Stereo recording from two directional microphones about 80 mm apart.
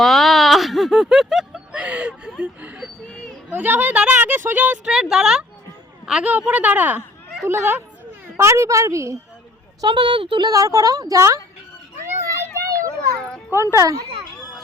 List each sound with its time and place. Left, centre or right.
0.0 s speech: centre; by 4.8 s right
4.9 s speech: centre; by 7.0 s right
7.4 s a woman's voice: right
9.8 s a woman's voice: right
10.5 s speech: right
12.0 s a sound: right
12.5 s children playing: right
13.1 s a sound: centre
13.5 s a woman's voice: right
13.8 s speech: right